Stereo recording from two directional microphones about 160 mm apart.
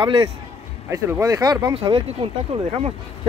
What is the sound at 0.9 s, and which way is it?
Speech, 20° right (ahead or behind).